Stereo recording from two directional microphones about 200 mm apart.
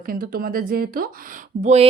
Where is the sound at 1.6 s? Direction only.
30° right (ahead or behind).